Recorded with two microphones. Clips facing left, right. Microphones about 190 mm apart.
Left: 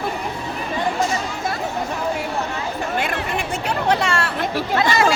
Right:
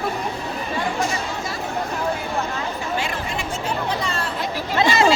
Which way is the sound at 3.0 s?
60° left (ahead or behind).